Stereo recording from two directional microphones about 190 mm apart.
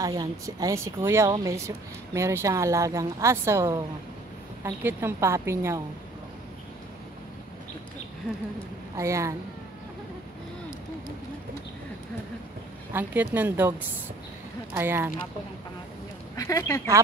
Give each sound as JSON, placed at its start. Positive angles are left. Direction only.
{"t": 0.0, "sound": "a woman's voice", "side_deg": -20}
{"t": 8.9, "sound": "a woman's voice", "side_deg": -15}
{"t": 12.9, "sound": "a woman's voice", "side_deg": -10}
{"t": 16.3, "sound": "speech", "side_deg": 15}